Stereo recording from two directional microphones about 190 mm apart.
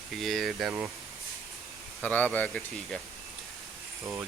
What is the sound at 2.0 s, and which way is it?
Speech, 10° left (ahead or behind).